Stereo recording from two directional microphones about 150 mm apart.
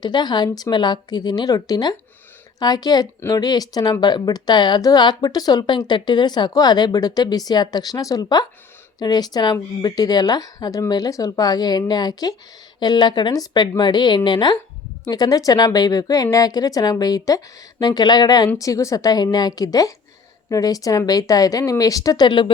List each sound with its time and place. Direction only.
0.0 s speech: 30° left (ahead or behind)